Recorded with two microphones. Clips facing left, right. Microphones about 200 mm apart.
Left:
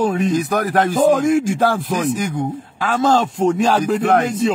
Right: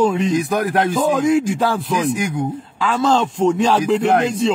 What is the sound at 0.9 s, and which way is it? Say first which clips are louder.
Speech: left 6 dB; 50° left (ahead or behind).